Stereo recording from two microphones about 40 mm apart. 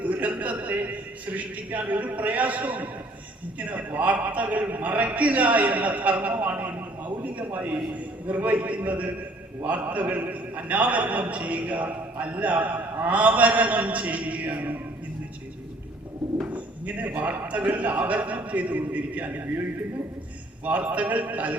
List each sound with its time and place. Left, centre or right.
0.0 s a man's voice: right
16.5 s bird: right
17.5 s a man's voice: right
20.7 s a man's voice: right